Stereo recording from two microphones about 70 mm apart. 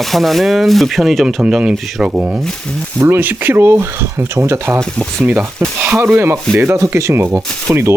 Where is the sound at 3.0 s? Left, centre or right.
Right.